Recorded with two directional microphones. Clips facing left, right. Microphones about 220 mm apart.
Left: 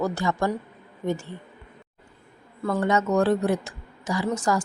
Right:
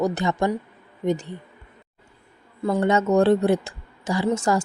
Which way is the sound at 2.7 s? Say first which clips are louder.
Right 3 dB; 25° right (ahead or behind).